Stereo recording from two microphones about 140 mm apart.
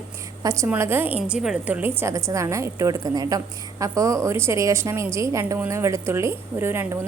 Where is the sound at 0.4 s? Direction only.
20° right (ahead or behind).